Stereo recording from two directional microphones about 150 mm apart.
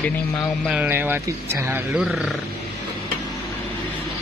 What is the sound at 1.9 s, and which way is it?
Speech, 5° right (ahead or behind).